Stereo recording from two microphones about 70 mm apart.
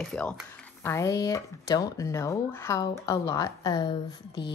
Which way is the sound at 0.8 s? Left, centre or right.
Left.